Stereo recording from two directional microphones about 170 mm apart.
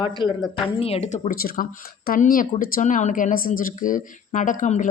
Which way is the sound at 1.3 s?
60° left (ahead or behind).